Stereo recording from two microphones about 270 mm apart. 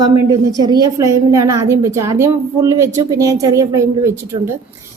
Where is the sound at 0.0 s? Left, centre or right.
Centre.